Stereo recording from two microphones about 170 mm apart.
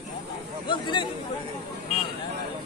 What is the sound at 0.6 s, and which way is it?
Speech, 30° left (ahead or behind).